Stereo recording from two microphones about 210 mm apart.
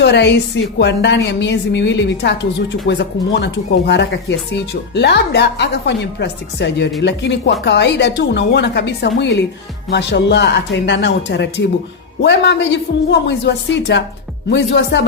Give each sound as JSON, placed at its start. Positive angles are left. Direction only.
{"t": 0.0, "sound": "a woman's voice", "side_deg": 55}